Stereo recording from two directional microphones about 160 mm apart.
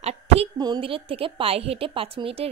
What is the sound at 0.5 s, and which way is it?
A woman's voice, 25° right (ahead or behind).